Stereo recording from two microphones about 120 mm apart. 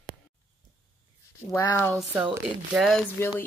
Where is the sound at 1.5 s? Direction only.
20° left (ahead or behind).